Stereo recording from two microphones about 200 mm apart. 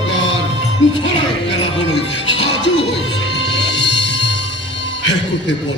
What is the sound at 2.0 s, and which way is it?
Music, 60° left (ahead or behind).